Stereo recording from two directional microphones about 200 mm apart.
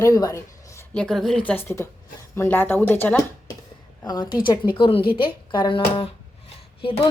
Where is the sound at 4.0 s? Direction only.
20° left (ahead or behind).